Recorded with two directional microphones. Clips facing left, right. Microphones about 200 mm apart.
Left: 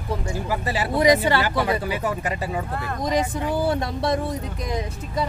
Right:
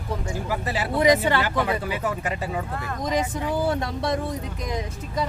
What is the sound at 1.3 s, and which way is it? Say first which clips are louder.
Speech: left 2 dB; 35° left (ahead or behind).